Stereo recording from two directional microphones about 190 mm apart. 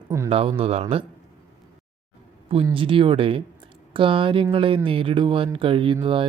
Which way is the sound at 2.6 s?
25° right (ahead or behind).